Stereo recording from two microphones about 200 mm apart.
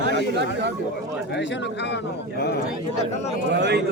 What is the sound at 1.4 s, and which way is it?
Speech, 60° left (ahead or behind).